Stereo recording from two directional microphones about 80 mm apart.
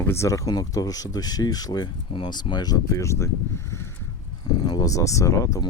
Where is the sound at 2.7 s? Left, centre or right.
Left.